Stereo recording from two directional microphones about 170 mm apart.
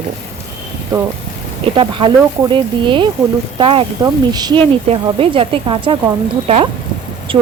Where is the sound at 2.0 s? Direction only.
30° right (ahead or behind).